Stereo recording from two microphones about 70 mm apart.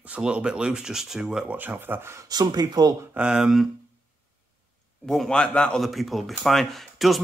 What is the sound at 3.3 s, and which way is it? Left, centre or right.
Speech, centre.